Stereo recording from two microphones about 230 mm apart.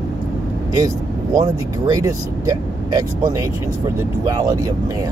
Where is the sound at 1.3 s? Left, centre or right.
Centre.